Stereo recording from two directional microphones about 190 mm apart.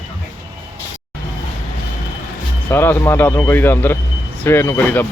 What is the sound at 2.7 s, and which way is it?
Speech, 10° left (ahead or behind).